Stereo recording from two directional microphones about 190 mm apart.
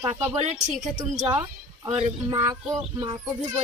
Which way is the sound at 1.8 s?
30° right (ahead or behind).